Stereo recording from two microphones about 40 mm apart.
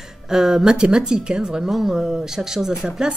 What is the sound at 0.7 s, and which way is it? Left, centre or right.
Speech, right.